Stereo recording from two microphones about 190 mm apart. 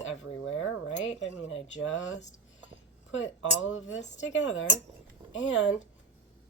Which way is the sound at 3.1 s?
90° left.